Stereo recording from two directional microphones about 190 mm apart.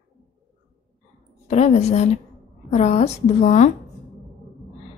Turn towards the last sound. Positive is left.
turn(degrees=40)  # may be behind; listen again after turning